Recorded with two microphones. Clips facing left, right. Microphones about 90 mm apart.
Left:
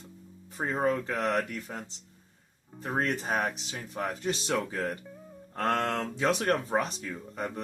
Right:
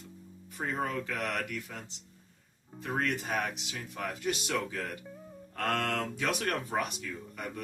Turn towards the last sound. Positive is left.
turn(degrees=35)  # may be behind; listen again after turning